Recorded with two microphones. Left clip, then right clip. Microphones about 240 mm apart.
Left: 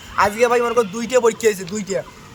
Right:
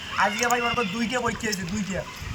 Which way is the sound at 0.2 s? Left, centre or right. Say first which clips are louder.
Left 7 dB; left.